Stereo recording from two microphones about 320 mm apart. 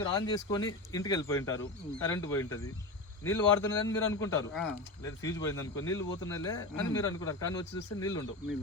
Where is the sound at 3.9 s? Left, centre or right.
Centre.